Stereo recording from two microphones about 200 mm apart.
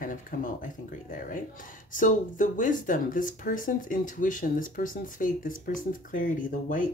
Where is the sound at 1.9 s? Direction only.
40° left (ahead or behind).